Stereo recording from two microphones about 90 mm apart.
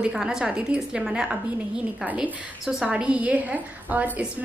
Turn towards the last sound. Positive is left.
turn(degrees=-20)  # may be behind; listen again after turning